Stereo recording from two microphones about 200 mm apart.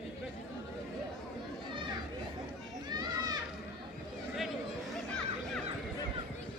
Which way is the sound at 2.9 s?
20° right (ahead or behind).